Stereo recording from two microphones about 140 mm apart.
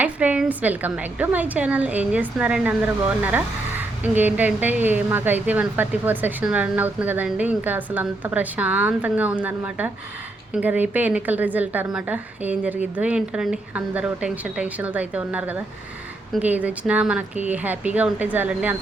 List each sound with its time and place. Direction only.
0.0 s a woman's voice: 10° right (ahead or behind)